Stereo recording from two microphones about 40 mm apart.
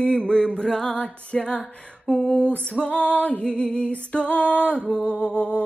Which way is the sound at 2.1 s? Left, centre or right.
Left.